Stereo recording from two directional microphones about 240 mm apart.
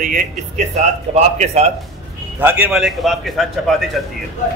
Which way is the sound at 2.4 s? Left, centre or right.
Centre.